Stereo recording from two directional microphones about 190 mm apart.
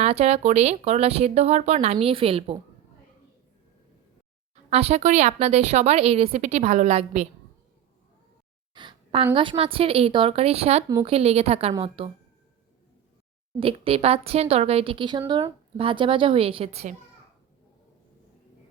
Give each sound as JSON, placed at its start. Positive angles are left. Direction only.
{"t": 0.0, "sound": "speech", "side_deg": -35}
{"t": 4.7, "sound": "speech", "side_deg": -35}
{"t": 8.7, "sound": "a woman's voice", "side_deg": -25}
{"t": 13.6, "sound": "a woman's voice", "side_deg": -30}